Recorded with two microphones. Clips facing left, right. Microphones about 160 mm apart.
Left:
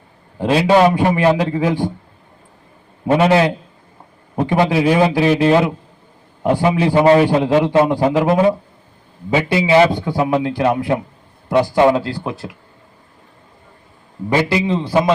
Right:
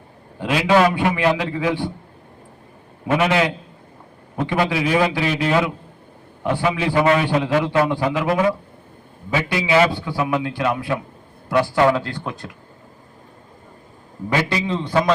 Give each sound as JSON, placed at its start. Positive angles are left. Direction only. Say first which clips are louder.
{"t": 0.3, "sound": "a man's voice", "louder": "left 4 dB", "side_deg": 35}
{"t": 0.9, "sound": "a man's voice", "louder": "left 5 dB", "side_deg": 40}
{"t": 3.1, "sound": "a man's voice", "louder": "left 5 dB", "side_deg": 30}
{"t": 6.4, "sound": "a man's voice", "louder": "left 5 dB", "side_deg": 40}
{"t": 7.5, "sound": "speech", "louder": "left 4 dB", "side_deg": 25}
{"t": 7.9, "sound": "a man's voice", "louder": "left 5 dB", "side_deg": 40}
{"t": 14.5, "sound": "speech", "louder": "left 5 dB", "side_deg": 20}